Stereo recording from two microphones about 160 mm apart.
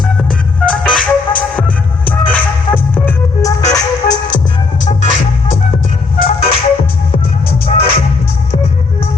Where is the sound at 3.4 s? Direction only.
20° left (ahead or behind).